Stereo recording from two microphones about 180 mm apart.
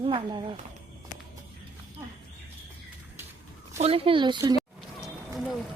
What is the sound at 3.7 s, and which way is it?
Speech, 35° right (ahead or behind).